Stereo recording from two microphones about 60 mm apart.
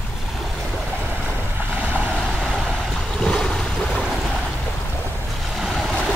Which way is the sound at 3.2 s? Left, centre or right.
Centre.